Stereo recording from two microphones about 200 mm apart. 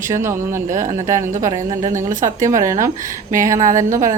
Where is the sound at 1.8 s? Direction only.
40° right (ahead or behind).